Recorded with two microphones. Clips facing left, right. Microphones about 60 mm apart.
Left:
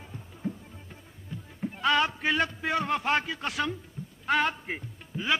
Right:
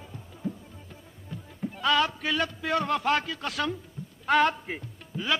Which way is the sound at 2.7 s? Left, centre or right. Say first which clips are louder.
Right 2 dB; centre.